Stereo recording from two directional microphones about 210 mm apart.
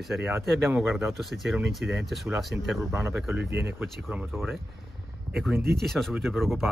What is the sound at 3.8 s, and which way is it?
Speech, 5° right (ahead or behind).